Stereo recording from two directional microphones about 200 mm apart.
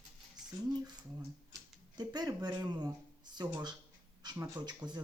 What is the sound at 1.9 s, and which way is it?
Speech, 20° right (ahead or behind).